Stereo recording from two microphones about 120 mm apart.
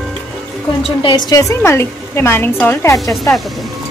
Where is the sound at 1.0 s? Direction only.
35° left (ahead or behind).